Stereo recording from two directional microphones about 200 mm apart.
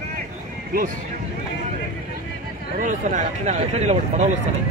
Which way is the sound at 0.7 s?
50° right (ahead or behind).